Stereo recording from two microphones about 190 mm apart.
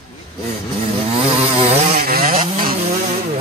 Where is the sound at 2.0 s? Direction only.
50° right (ahead or behind).